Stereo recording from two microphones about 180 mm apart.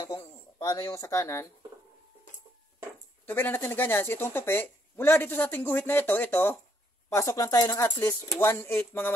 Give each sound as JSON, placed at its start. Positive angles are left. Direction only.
{"t": 0.2, "sound": "speech", "side_deg": 20}
{"t": 3.3, "sound": "speech", "side_deg": 10}